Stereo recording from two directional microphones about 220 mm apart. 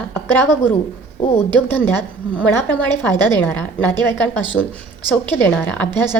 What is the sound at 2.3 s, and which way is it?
A woman's voice, 10° left (ahead or behind).